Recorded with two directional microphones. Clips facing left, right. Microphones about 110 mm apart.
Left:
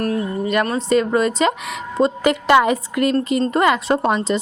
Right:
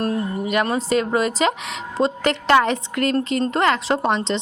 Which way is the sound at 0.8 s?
Centre (ahead or behind).